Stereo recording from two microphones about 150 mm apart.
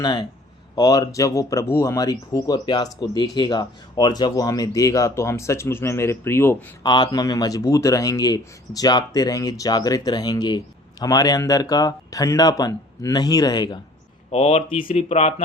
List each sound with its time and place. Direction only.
0.0 s speech: 30° left (ahead or behind)
6.8 s speech: 30° left (ahead or behind)
14.3 s speech: 45° left (ahead or behind)